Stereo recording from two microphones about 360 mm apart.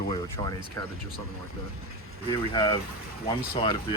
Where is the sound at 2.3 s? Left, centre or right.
Centre.